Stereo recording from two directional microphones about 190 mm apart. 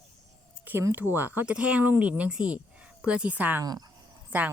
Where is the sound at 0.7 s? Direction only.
10° right (ahead or behind).